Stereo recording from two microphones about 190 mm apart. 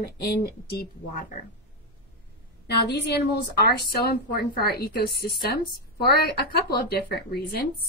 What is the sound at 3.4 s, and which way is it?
A woman's voice, 55° left (ahead or behind).